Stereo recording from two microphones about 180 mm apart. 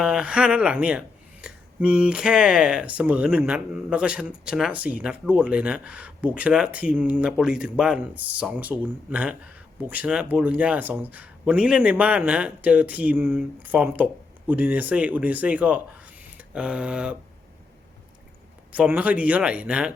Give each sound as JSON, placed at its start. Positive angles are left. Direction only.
{"t": 0.0, "sound": "speech", "side_deg": -5}
{"t": 18.7, "sound": "speech", "side_deg": -5}